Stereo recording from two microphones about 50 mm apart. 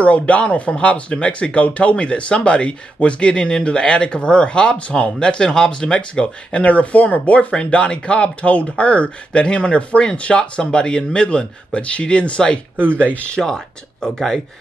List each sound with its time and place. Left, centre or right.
0.0 s speech: left
14.0 s speech: centre